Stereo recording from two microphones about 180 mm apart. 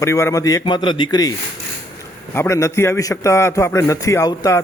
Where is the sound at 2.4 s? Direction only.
15° left (ahead or behind).